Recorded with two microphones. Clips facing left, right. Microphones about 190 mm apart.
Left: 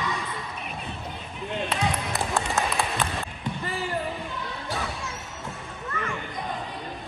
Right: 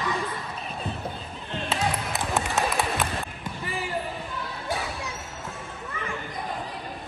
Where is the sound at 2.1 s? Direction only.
Centre (ahead or behind).